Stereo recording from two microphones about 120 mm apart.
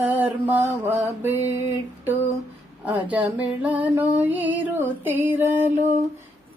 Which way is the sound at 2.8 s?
10° right (ahead or behind).